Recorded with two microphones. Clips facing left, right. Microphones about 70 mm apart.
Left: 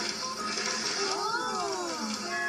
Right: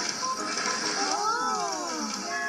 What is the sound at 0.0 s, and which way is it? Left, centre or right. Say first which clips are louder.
Music: right 4 dB; centre.